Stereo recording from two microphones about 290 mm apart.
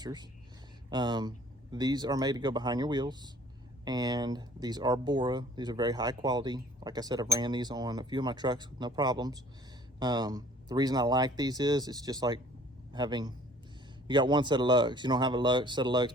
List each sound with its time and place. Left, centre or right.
0.0 s a man's voice: centre